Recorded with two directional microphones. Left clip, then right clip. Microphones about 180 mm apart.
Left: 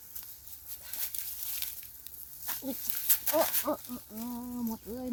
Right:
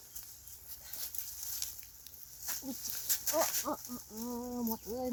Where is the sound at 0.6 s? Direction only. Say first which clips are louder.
Left 4 dB; 55° left (ahead or behind).